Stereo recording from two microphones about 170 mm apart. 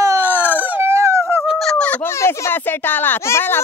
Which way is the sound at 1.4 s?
Centre (ahead or behind).